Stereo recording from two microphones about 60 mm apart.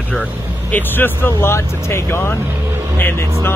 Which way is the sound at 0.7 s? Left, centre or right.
Left.